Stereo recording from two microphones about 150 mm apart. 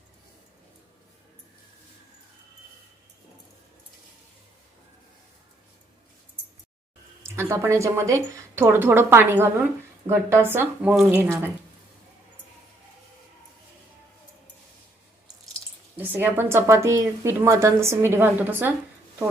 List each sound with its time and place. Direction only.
7.2 s a woman's voice: 15° right (ahead or behind)
16.0 s a woman's voice: 10° right (ahead or behind)